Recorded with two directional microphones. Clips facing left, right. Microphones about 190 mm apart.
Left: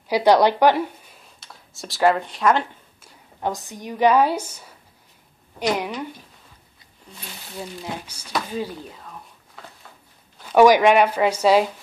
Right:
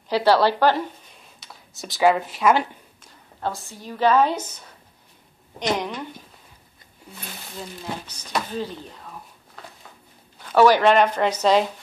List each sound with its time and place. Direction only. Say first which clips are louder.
0.1 s speech: left 2 dB; 15° left (ahead or behind)
1.4 s speech: even; centre (ahead or behind)
3.0 s a woman's voice: left 2 dB; 15° left (ahead or behind)
7.1 s speech: right 2 dB; 5° right (ahead or behind)
8.1 s speech: even; 10° left (ahead or behind)
10.4 s speech: left 2 dB; 10° left (ahead or behind)